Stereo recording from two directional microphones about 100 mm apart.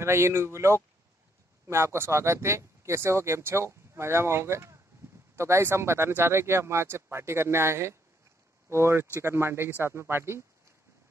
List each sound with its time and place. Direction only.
0.0 s speech: 25° right (ahead or behind)